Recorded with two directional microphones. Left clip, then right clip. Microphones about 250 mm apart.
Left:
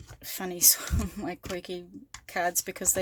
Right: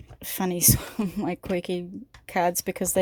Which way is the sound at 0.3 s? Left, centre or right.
Right.